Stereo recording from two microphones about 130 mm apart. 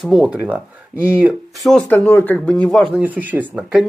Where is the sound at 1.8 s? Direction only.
15° left (ahead or behind).